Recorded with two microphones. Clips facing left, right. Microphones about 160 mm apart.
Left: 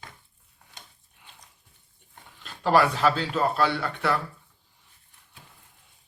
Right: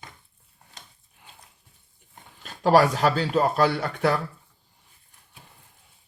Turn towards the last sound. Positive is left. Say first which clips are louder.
# right 3 dB
turn(degrees=-45)  # may be behind; listen again after turning